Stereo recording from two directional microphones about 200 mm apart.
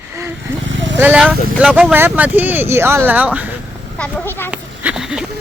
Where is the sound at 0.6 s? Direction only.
65° right (ahead or behind).